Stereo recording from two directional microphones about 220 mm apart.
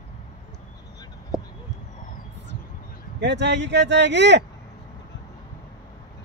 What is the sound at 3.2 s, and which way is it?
A man's voice, 50° right (ahead or behind).